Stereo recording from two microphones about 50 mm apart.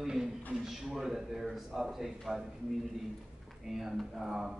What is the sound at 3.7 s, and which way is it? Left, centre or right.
Speech, centre.